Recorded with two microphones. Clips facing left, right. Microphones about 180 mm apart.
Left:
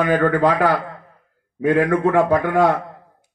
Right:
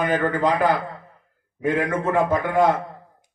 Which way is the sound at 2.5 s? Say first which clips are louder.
Left 2 dB; 75° left (ahead or behind).